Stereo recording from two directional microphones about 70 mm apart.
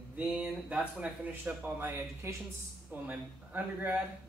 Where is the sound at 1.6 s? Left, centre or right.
Right.